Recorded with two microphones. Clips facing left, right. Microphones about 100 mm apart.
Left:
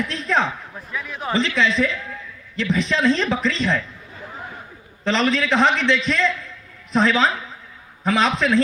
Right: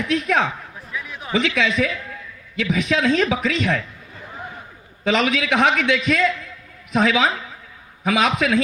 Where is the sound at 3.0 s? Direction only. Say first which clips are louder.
Even; 55° right (ahead or behind).